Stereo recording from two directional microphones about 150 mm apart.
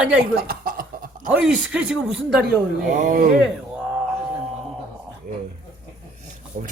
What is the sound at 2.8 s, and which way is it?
Speech, 55° right (ahead or behind).